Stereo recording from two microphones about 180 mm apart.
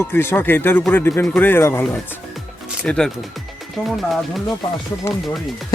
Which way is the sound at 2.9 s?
5° left (ahead or behind).